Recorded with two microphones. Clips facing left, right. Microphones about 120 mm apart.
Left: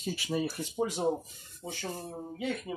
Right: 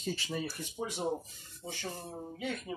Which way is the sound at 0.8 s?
40° left (ahead or behind).